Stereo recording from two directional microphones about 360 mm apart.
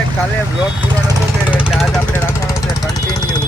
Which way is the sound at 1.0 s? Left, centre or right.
Centre.